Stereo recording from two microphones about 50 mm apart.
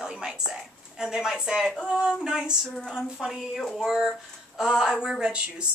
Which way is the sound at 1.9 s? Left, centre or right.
Centre.